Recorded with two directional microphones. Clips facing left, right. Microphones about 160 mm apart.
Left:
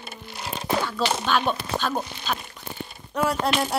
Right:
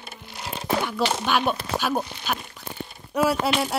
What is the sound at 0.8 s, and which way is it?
Speech, 10° right (ahead or behind).